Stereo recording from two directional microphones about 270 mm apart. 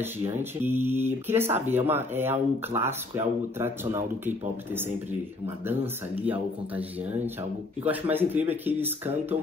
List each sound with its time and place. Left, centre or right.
0.0 s speech: centre